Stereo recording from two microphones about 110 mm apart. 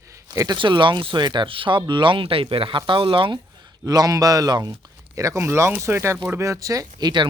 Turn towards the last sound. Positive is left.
turn(degrees=-30)  # may be behind; listen again after turning